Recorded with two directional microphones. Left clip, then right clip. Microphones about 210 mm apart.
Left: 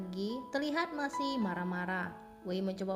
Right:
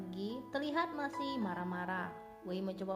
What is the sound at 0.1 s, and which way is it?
Speech, 45° left (ahead or behind).